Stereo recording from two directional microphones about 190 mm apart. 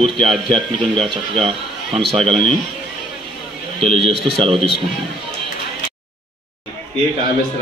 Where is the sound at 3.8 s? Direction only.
30° right (ahead or behind).